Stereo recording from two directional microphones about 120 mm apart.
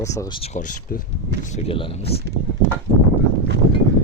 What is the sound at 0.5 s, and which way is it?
Speech, 90° left.